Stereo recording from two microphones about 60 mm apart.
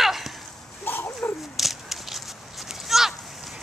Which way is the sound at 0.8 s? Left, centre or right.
Left.